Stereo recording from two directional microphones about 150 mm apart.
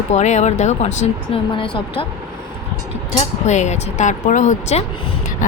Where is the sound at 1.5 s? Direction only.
35° left (ahead or behind).